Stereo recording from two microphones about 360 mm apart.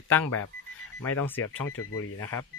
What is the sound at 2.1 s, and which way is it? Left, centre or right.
Speech, centre.